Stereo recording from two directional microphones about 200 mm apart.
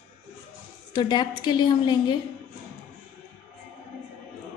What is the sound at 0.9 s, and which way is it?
A woman's voice, 25° left (ahead or behind).